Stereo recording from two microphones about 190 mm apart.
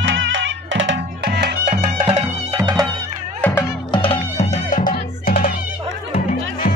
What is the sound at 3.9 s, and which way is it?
Music, 30° left (ahead or behind).